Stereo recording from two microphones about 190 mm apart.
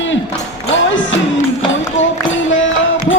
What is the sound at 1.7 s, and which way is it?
Music, 80° left.